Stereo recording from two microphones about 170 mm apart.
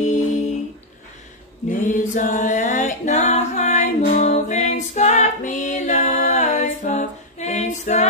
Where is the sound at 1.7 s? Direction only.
55° left (ahead or behind).